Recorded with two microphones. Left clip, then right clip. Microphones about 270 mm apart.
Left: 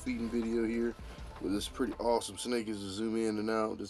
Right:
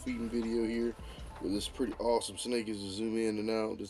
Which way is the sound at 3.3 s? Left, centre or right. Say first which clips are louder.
Left 1 dB; left.